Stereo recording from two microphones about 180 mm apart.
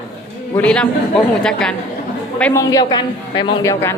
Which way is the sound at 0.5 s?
5° left (ahead or behind).